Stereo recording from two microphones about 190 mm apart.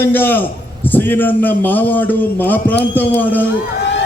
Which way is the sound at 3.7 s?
70° left (ahead or behind).